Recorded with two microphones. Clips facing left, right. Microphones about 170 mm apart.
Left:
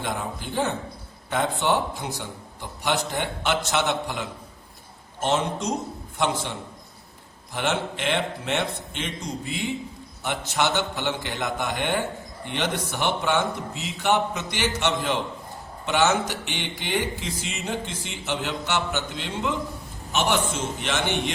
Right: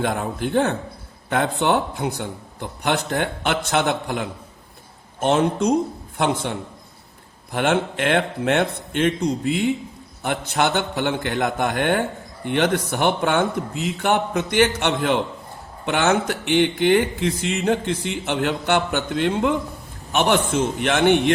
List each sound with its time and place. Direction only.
0.0 s speech: 60° right (ahead or behind)